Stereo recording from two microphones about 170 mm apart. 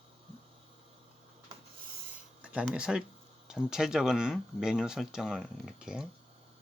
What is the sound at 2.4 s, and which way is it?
Speech, 5° right (ahead or behind).